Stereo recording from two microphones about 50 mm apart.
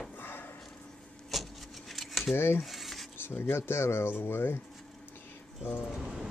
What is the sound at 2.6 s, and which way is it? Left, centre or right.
Rub, centre.